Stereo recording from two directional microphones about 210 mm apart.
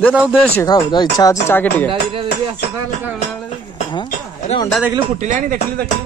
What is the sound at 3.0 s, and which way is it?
Speech, 5° right (ahead or behind).